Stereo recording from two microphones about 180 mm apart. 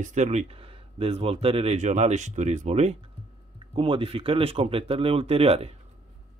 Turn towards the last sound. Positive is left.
turn(degrees=-35)  # may be behind; listen again after turning